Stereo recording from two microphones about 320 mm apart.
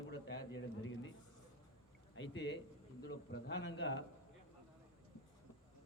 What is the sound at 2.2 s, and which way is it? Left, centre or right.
A man's voice, left.